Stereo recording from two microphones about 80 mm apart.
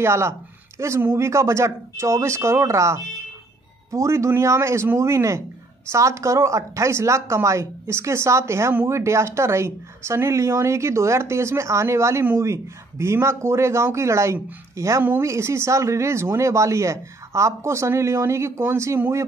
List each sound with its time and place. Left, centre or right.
0.0 s speech: right